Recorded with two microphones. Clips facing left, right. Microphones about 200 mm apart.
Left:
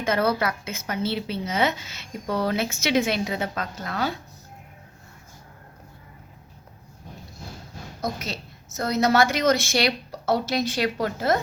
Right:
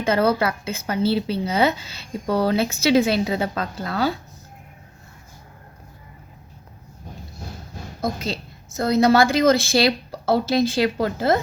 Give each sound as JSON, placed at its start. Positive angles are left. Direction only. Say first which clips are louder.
{"t": 0.0, "sound": "speech", "louder": "right 4 dB", "side_deg": -30}
{"t": 8.0, "sound": "a woman's voice", "louder": "right 4 dB", "side_deg": -30}